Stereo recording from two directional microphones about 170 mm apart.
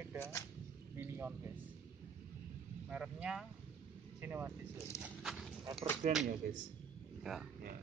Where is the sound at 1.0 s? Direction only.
10° right (ahead or behind).